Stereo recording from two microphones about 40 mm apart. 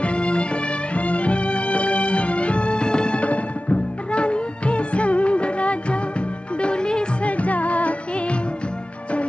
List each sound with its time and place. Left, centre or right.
0.0 s music: left
7.2 s music: left